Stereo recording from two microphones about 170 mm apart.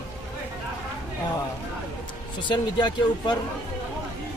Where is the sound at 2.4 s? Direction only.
25° left (ahead or behind).